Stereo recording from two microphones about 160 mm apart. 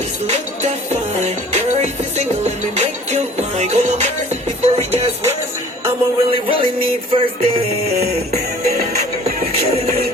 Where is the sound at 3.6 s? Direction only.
45° right (ahead or behind).